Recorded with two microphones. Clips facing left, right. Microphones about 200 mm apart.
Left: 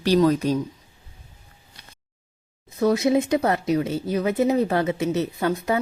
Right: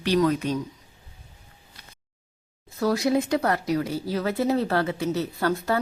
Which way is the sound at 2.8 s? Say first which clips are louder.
Left 3 dB; 20° left (ahead or behind).